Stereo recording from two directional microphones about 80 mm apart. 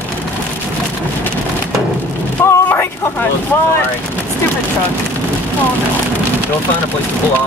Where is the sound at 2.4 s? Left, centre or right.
Left.